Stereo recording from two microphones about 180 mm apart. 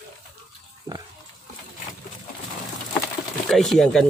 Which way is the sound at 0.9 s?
20° right (ahead or behind).